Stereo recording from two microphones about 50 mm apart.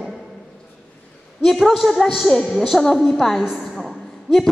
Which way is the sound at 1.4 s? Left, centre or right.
Centre.